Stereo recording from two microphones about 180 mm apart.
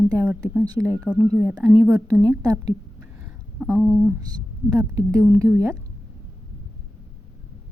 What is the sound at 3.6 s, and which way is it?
Speech, centre (ahead or behind).